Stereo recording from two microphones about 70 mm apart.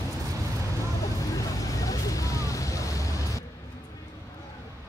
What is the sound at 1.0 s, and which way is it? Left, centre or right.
Vehicle, left.